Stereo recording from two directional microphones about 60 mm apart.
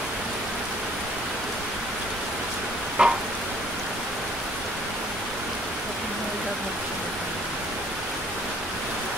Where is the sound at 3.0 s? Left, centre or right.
Centre.